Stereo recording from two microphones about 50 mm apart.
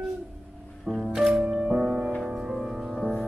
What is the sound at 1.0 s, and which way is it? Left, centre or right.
Music, centre.